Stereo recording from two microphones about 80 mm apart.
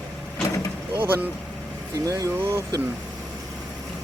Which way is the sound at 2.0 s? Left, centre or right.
Right.